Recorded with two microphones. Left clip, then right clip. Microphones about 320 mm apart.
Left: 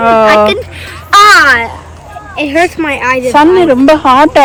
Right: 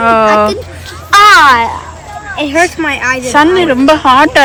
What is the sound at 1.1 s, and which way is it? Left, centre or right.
Speech, centre.